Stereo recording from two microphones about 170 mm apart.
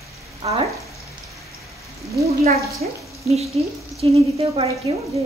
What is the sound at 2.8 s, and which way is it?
Speech, 50° right (ahead or behind).